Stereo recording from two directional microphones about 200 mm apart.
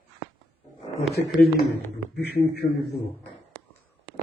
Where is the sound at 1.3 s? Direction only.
50° left (ahead or behind).